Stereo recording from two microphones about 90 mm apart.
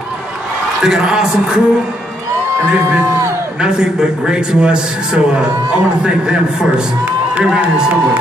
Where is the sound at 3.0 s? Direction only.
30° right (ahead or behind).